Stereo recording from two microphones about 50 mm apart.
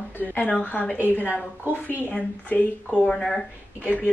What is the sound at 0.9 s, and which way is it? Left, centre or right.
Speech, right.